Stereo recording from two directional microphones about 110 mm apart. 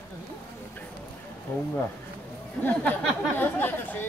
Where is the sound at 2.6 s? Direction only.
15° left (ahead or behind).